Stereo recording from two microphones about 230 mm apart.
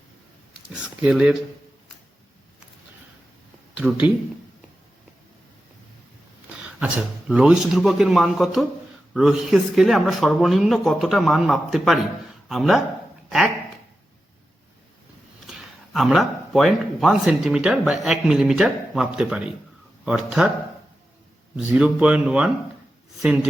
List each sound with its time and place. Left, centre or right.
0.7 s speech: centre
3.8 s speech: centre
6.6 s speech: centre
15.4 s speech: centre
21.5 s speech: centre